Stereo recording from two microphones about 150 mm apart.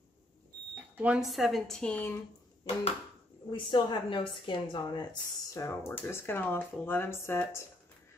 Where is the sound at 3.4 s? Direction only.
30° left (ahead or behind).